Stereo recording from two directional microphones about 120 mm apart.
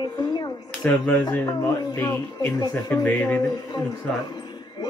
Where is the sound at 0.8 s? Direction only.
15° left (ahead or behind).